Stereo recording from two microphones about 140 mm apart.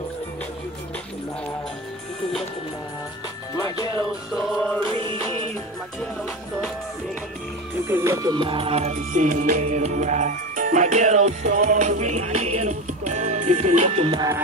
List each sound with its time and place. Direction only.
3.5 s music: 25° left (ahead or behind)
4.3 s music: centre (ahead or behind)
4.9 s music: 45° right (ahead or behind)
7.8 s music: 20° right (ahead or behind); by 14.2 s 45° right (ahead or behind)